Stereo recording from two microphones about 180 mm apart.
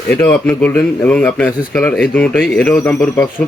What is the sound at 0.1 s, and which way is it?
Speech, 10° left (ahead or behind).